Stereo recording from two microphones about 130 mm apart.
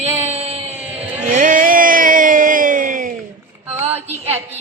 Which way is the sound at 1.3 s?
80° right.